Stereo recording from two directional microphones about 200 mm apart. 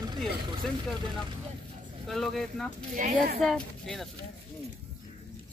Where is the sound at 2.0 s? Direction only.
Centre (ahead or behind).